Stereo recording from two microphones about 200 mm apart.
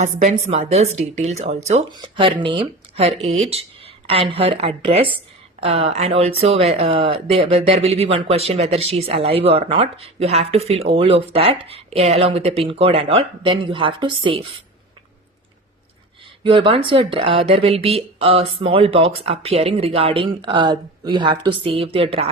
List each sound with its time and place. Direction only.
0.0 s speech: 35° right (ahead or behind)
1.9 s speech: 25° right (ahead or behind)
16.4 s speech: 25° right (ahead or behind)